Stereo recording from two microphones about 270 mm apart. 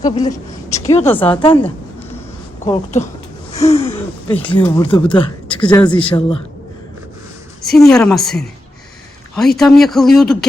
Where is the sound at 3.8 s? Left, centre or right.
Centre.